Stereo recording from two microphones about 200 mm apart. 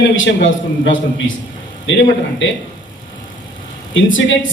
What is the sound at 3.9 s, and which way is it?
Speech, 75° left (ahead or behind).